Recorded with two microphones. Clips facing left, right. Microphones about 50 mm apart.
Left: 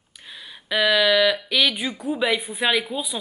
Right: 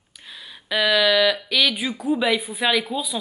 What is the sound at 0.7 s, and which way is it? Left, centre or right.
Speech, centre.